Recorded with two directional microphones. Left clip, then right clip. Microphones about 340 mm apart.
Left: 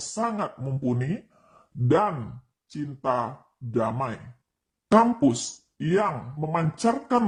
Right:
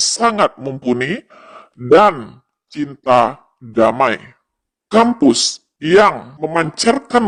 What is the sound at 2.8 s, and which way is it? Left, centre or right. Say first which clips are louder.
Speech: right 14 dB; right.